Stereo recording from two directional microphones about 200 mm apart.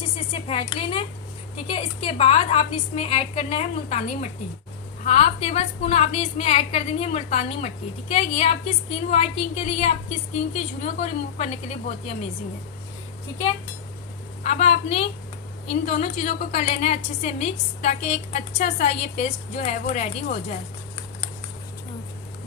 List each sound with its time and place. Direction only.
0.4 s a woman's voice: 30° left (ahead or behind)
14.4 s a woman's voice: 35° left (ahead or behind)
18.3 s a woman's voice: 35° left (ahead or behind)